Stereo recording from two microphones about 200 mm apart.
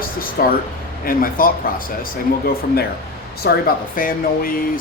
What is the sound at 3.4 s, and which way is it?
A man's voice, 55° left (ahead or behind).